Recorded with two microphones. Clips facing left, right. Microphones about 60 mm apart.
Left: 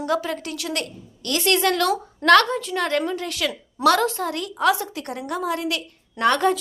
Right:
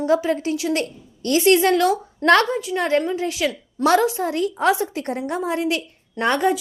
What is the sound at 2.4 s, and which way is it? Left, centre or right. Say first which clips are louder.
A woman's voice: right 2 dB; centre.